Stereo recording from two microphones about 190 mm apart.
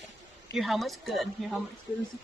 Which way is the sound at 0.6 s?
Centre (ahead or behind).